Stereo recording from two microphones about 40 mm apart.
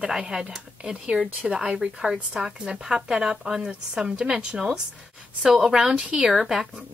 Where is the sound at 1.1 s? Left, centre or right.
Centre.